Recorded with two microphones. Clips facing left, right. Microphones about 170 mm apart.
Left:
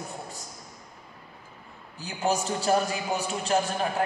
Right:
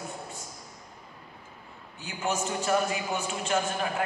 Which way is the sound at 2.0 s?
35° left (ahead or behind).